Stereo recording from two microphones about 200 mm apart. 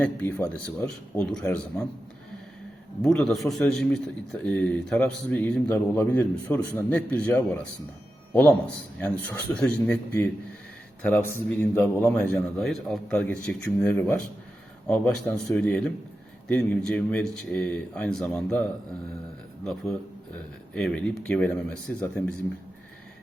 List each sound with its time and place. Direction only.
0.0 s speech: 5° left (ahead or behind)
3.0 s a man's voice: 5° left (ahead or behind)
20.7 s speech: 5° left (ahead or behind)